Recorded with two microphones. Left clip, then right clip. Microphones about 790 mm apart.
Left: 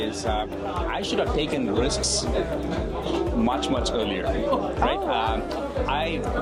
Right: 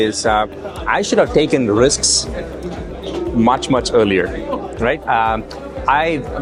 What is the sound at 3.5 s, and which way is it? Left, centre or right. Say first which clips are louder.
Speech: right 10 dB; right.